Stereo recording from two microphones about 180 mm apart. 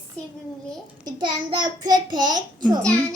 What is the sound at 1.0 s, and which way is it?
A child's voice, 25° right (ahead or behind).